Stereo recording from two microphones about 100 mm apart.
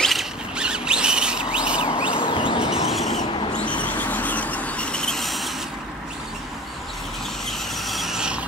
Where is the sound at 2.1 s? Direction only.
60° left (ahead or behind).